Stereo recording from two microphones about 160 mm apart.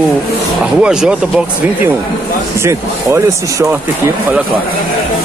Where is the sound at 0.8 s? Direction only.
5° right (ahead or behind).